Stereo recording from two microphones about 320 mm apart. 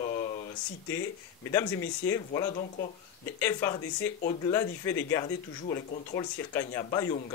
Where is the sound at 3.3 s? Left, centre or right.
Centre.